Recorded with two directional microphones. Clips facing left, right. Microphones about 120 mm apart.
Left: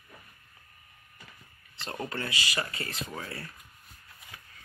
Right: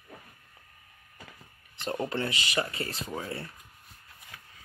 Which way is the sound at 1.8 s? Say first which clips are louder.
Right 5 dB; 20° right (ahead or behind).